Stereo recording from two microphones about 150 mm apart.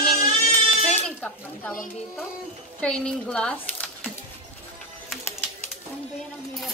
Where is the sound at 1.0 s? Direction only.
10° left (ahead or behind).